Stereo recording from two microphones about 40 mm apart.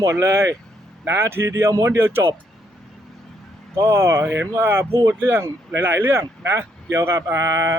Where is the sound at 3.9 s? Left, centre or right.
Right.